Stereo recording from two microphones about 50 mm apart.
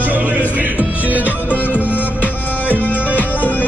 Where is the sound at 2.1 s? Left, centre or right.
Left.